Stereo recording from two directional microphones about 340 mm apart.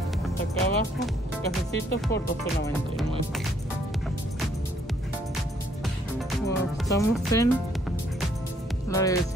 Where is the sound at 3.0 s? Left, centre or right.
Centre.